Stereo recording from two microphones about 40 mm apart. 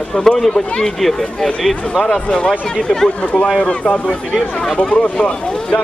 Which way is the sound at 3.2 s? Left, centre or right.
Left.